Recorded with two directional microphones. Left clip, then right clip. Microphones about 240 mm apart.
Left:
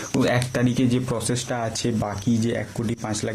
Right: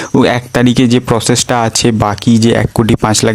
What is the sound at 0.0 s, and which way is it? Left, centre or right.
Speech, right.